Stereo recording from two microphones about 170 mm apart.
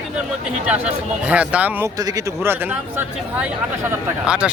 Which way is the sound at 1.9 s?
20° right (ahead or behind).